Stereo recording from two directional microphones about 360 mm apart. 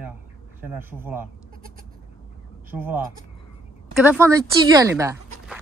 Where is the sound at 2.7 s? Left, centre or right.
Centre.